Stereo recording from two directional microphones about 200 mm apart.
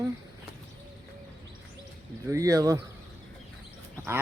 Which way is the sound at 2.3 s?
15° right (ahead or behind).